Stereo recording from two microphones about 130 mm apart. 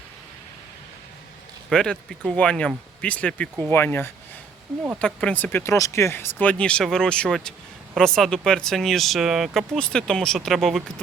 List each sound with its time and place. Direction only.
1.7 s speech: 5° left (ahead or behind)